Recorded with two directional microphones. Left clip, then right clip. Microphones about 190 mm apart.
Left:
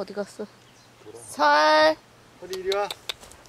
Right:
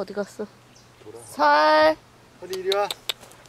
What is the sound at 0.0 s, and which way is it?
Female singing, centre (ahead or behind).